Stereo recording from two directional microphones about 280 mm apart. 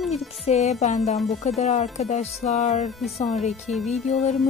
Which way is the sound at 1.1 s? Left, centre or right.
Centre.